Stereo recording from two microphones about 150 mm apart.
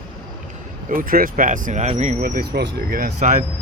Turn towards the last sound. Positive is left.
turn(degrees=-50)  # may be behind; listen again after turning